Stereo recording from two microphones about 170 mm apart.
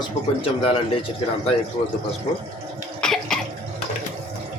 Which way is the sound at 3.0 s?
5° left (ahead or behind).